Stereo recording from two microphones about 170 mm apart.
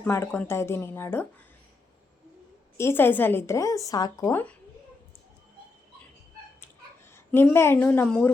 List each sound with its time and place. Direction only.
0.0 s a woman's voice: 15° left (ahead or behind)
2.7 s a woman's voice: 15° left (ahead or behind)
7.1 s a woman's voice: 10° left (ahead or behind)